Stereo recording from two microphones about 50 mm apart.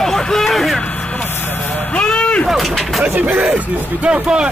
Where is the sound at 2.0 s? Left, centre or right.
Left.